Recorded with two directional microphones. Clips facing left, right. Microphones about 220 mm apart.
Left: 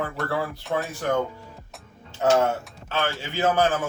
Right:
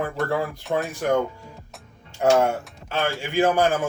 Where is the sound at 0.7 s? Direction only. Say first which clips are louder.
Right 3 dB; 15° right (ahead or behind).